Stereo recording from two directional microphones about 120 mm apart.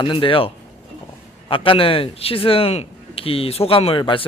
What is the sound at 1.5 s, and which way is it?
Speech, 50° left (ahead or behind).